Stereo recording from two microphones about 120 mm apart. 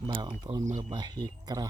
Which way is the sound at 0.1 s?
40° right (ahead or behind).